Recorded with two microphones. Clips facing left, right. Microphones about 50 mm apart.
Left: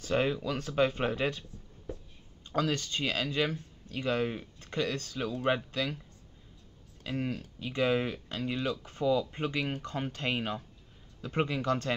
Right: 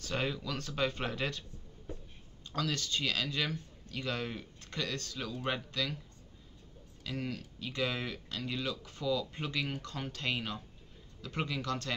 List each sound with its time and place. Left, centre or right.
0.0 s speech: centre
2.5 s speech: left
7.0 s speech: left